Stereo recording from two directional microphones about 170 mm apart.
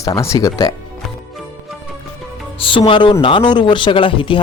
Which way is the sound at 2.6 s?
30° left (ahead or behind).